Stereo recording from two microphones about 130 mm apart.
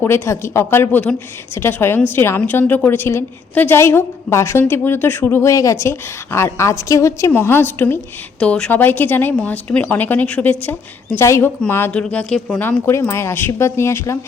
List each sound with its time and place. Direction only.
0.0 s speech: 20° left (ahead or behind)
11.9 s speech: 10° left (ahead or behind)